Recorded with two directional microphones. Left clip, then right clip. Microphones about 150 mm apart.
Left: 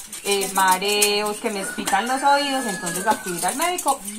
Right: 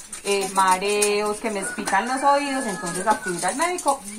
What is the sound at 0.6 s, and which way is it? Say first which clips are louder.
Speech: left 2 dB; 20° right (ahead or behind).